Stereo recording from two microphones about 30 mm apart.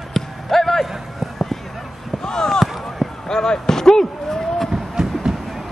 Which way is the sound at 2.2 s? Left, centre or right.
Left.